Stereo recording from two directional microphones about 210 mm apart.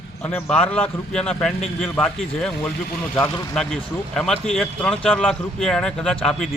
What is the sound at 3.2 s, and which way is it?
Speech, 20° left (ahead or behind).